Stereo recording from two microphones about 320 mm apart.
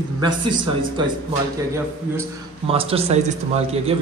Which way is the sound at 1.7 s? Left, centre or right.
Centre.